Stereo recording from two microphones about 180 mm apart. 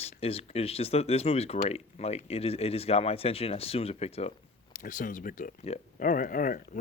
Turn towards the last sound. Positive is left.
turn(degrees=50)  # may be behind; listen again after turning